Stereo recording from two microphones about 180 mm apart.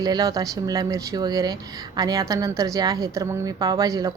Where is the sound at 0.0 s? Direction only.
20° right (ahead or behind).